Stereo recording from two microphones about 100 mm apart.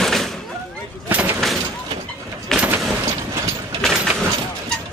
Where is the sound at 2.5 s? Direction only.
5° left (ahead or behind).